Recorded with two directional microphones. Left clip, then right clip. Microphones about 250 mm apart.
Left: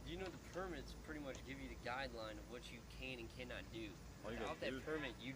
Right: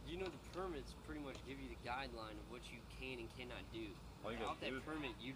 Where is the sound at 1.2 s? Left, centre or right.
Left.